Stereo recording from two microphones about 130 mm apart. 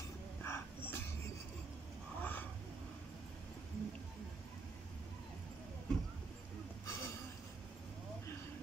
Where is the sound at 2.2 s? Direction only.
10° left (ahead or behind).